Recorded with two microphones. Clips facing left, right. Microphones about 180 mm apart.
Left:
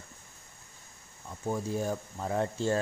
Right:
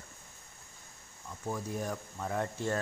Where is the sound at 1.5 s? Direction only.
30° left (ahead or behind).